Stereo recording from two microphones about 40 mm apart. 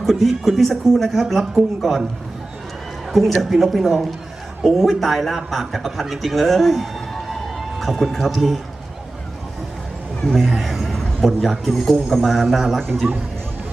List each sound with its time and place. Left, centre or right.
0.0 s speech: centre
3.1 s a man's voice: centre
10.2 s speech: centre
13.0 s speech: right